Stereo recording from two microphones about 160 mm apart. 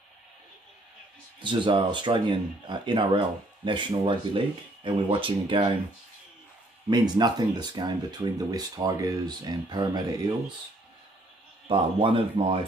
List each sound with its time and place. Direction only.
1.4 s speech: 30° right (ahead or behind)
6.9 s speech: 25° right (ahead or behind)
11.6 s speech: 30° right (ahead or behind)